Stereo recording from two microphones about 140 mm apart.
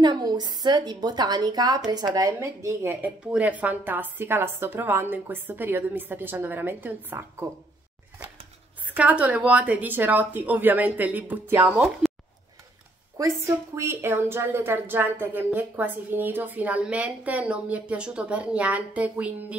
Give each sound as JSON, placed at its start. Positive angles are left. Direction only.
{"t": 0.0, "sound": "a woman's voice", "side_deg": -30}
{"t": 8.8, "sound": "a woman's voice", "side_deg": -10}
{"t": 12.0, "sound": "a sound", "side_deg": 0}
{"t": 13.2, "sound": "a woman's voice", "side_deg": -20}